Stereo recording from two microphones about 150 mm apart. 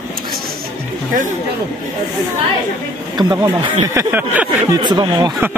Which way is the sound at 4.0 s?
15° right (ahead or behind).